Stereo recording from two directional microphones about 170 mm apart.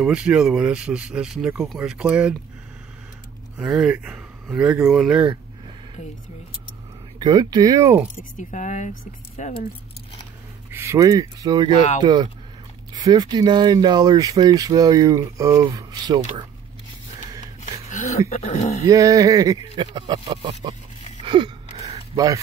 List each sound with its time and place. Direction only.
0.0 s speech: 5° right (ahead or behind)
3.5 s speech: 5° right (ahead or behind)
7.2 s speech: 25° right (ahead or behind)
8.2 s speech: 45° left (ahead or behind)
10.7 s speech: 15° right (ahead or behind)
17.8 s a sound: 45° left (ahead or behind)
18.3 s speech: 40° left (ahead or behind)
18.9 s speech: 20° right (ahead or behind)
21.2 s a sound: 25° right (ahead or behind)